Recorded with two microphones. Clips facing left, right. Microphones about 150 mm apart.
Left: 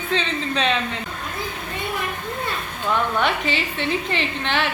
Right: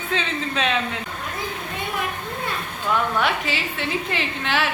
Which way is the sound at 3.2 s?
5° right (ahead or behind).